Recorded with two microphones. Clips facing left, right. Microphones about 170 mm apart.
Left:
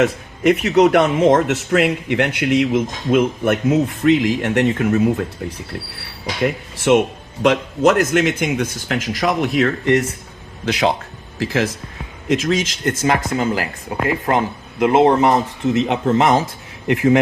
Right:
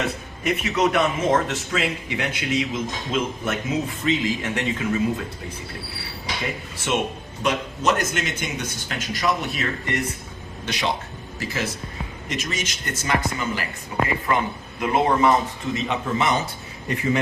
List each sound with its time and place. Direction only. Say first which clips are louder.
0.0 s speech: left 10 dB; 80° left
1.3 s speech: left 7 dB; 60° left (ahead or behind)
6.4 s speech: left 13 dB; 70° left (ahead or behind)
7.4 s speech: left 8 dB; 90° left
11.3 s speech: left 8 dB; 90° left
14.3 s speech: left 5 dB; 75° left (ahead or behind)
16.1 s speech: left 7 dB; 90° left